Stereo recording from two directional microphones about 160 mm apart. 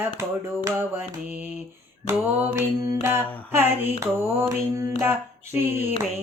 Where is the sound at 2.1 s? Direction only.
10° right (ahead or behind).